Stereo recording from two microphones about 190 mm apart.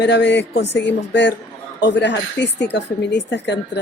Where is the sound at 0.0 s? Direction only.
65° left (ahead or behind).